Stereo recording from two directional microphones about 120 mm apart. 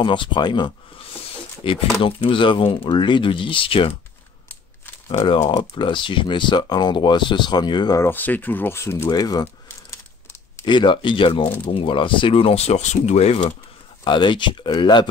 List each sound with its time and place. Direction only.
0.0 s speech: 45° left (ahead or behind)
5.5 s speech: 40° left (ahead or behind)
8.0 s speech: 15° left (ahead or behind)
9.1 s speech: 35° left (ahead or behind)
10.6 s speech: 40° left (ahead or behind); by 13.4 s 65° left (ahead or behind)
14.0 s speech: 40° left (ahead or behind)